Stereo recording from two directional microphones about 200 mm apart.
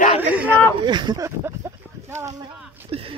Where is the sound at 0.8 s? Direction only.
20° right (ahead or behind).